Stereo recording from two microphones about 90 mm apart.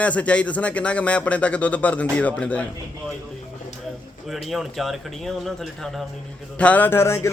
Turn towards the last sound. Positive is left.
turn(degrees=30)  # may be behind; listen again after turning